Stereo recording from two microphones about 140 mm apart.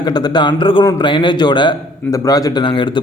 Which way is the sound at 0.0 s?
30° left (ahead or behind).